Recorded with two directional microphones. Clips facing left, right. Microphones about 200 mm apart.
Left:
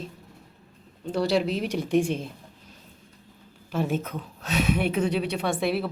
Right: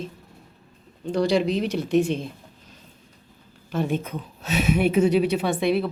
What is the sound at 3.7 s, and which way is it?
A woman's voice, 5° left (ahead or behind).